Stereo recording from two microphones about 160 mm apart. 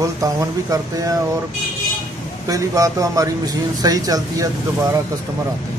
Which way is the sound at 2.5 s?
20° right (ahead or behind).